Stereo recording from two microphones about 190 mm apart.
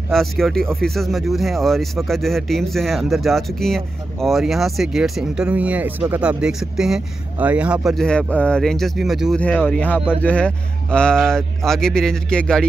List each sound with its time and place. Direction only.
0.1 s speech: centre (ahead or behind)